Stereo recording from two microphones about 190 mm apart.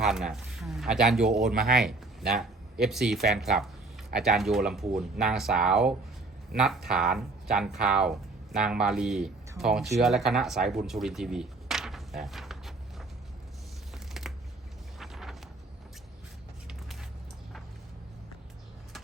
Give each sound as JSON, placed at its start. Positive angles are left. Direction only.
{"t": 0.0, "sound": "speech", "side_deg": 0}
{"t": 13.9, "sound": "shuffling cards", "side_deg": 0}
{"t": 14.9, "sound": "a sound", "side_deg": 0}